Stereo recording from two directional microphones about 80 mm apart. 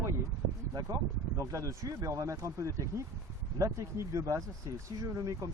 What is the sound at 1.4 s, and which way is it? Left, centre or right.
Speech, right.